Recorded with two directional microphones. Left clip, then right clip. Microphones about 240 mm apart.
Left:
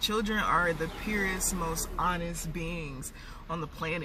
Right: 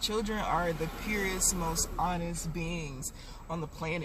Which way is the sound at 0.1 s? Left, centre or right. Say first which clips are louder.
Left 3 dB; centre.